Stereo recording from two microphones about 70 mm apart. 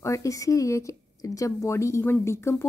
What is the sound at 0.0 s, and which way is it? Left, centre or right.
Speech, left.